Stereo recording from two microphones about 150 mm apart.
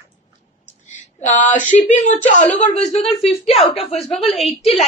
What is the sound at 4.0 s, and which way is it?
Speech, centre (ahead or behind).